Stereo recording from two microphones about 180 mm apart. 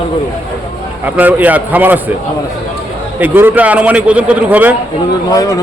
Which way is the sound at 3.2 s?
10° right (ahead or behind).